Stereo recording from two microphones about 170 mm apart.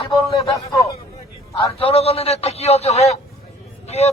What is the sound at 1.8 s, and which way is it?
A man's voice, 35° left (ahead or behind).